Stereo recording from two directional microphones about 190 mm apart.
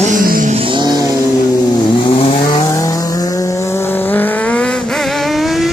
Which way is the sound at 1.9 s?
25° left (ahead or behind).